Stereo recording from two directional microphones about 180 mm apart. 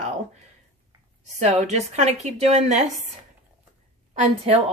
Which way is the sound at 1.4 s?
40° right (ahead or behind).